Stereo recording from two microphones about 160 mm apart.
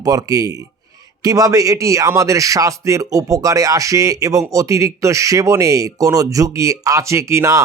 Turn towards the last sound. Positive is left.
turn(degrees=-20)  # may be behind; listen again after turning